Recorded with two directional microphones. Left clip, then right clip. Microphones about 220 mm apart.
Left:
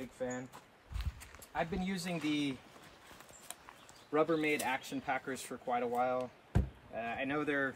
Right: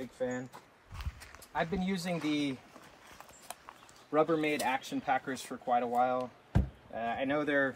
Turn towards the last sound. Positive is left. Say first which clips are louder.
# right 5 dB
turn(degrees=0)  # may be behind; listen again after turning